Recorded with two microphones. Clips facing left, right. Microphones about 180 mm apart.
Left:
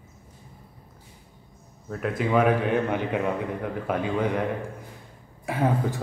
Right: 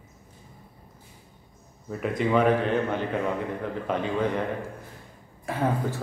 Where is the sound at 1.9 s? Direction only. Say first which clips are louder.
Even; centre (ahead or behind).